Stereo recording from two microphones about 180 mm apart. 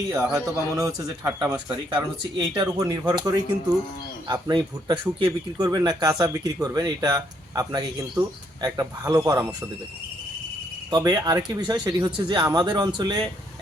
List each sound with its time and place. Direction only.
0.1 s speech: 15° right (ahead or behind)
3.0 s a man's voice: 10° right (ahead or behind)
4.3 s speech: 20° right (ahead or behind)
10.9 s speech: 20° right (ahead or behind)